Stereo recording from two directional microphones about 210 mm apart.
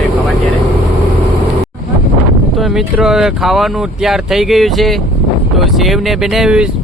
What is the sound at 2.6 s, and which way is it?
Speech, centre (ahead or behind).